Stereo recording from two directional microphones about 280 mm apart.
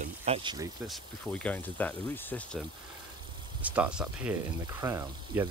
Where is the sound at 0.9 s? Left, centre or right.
Centre.